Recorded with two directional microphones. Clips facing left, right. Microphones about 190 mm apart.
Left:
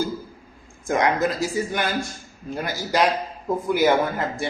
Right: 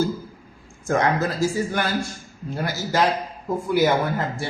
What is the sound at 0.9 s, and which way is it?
Speech, 15° left (ahead or behind).